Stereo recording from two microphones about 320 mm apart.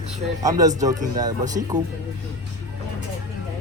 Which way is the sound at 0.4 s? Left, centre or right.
Centre.